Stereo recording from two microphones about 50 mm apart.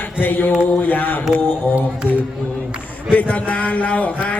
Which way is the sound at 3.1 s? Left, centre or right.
Left.